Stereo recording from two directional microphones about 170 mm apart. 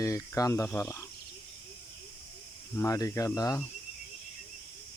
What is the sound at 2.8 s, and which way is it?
Speech, 20° left (ahead or behind).